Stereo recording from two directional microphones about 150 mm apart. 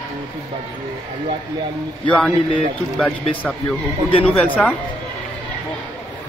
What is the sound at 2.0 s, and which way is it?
Speech, 5° left (ahead or behind).